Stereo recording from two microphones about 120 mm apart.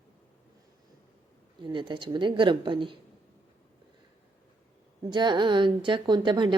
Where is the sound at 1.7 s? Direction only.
40° right (ahead or behind).